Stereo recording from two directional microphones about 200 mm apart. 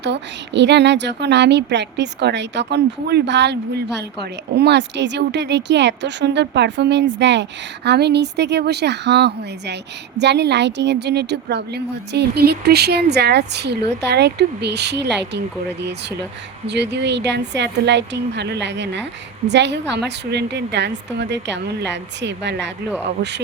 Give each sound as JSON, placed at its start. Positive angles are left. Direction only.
{"t": 0.0, "sound": "a woman's voice", "side_deg": -60}